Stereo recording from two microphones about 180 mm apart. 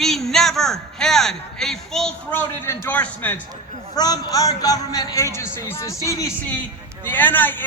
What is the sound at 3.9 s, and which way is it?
A man's voice, 20° left (ahead or behind).